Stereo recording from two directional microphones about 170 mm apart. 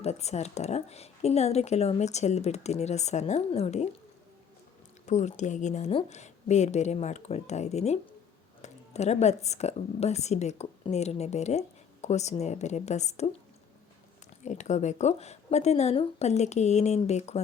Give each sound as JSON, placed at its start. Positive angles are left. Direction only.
{"t": 0.0, "sound": "speech", "side_deg": 40}
{"t": 5.0, "sound": "speech", "side_deg": 45}
{"t": 14.4, "sound": "speech", "side_deg": 45}